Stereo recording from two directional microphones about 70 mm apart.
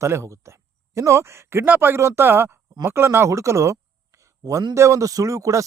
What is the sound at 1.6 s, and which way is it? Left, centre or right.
Speech, right.